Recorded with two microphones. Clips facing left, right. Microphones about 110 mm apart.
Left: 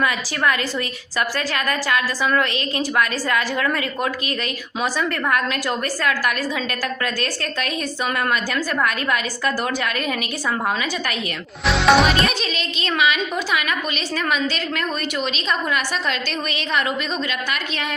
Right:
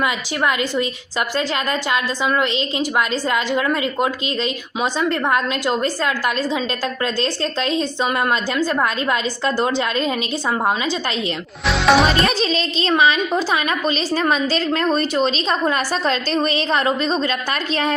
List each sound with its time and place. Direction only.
0.0 s a woman's voice: 20° right (ahead or behind)
11.6 s speech: centre (ahead or behind)
12.2 s a woman's voice: 30° right (ahead or behind)